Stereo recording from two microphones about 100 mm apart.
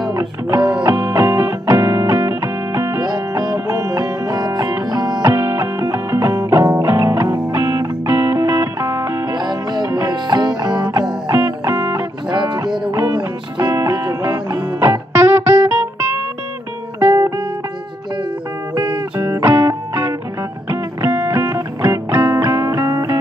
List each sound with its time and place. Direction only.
0.1 s music: 35° right (ahead or behind)
0.6 s music: 10° right (ahead or behind)
0.8 s music: 20° right (ahead or behind)
3.0 s music: 40° right (ahead or behind)
5.3 s music: 25° right (ahead or behind)
7.2 s music: 45° right (ahead or behind)
7.5 s music: 25° right (ahead or behind)
9.2 s music: 45° right (ahead or behind)
11.3 s music: 25° right (ahead or behind)
12.3 s music: 50° right (ahead or behind)
13.7 s music: 30° right (ahead or behind)
17.0 s music: 30° right (ahead or behind)
18.9 s music: 30° right (ahead or behind)